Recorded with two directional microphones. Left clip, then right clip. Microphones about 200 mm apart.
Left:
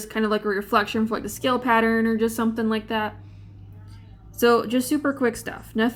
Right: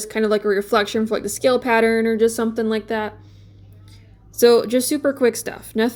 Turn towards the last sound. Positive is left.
turn(degrees=-25)  # may be behind; listen again after turning